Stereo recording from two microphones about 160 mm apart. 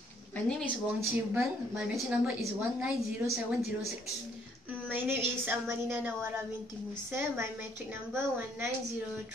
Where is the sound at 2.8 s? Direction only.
10° right (ahead or behind).